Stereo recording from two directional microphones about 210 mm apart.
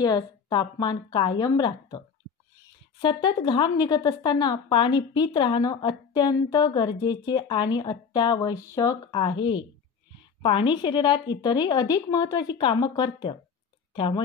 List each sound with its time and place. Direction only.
0.0 s a woman's voice: 20° left (ahead or behind)